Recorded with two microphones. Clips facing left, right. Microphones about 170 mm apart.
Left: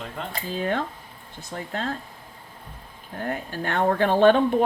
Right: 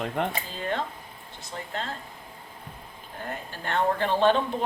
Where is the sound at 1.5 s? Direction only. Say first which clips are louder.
Left 4 dB; 50° left (ahead or behind).